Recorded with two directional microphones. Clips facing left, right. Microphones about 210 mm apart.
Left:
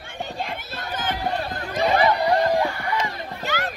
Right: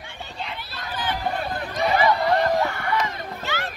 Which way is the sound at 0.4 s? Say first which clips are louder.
Left 3 dB; 45° left (ahead or behind).